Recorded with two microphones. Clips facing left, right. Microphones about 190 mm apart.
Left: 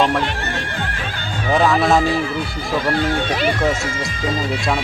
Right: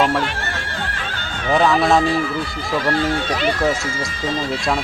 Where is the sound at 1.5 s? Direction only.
Centre (ahead or behind).